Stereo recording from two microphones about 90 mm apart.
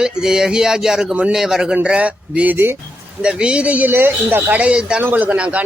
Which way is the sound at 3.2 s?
10° right (ahead or behind).